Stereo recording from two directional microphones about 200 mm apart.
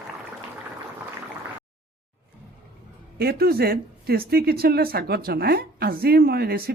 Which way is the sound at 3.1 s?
50° right (ahead or behind).